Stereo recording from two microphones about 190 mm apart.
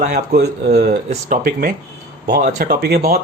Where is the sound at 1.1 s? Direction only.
45° right (ahead or behind).